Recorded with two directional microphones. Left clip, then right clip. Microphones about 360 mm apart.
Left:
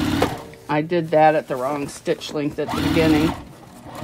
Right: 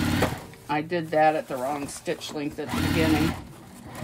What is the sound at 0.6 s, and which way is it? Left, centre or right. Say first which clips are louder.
Speech: left 6 dB; left.